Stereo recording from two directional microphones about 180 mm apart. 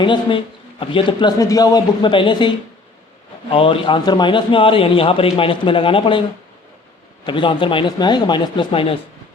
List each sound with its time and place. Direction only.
0.0 s a man's voice: 30° left (ahead or behind)
3.5 s a man's voice: 30° left (ahead or behind)
7.3 s a man's voice: 25° left (ahead or behind)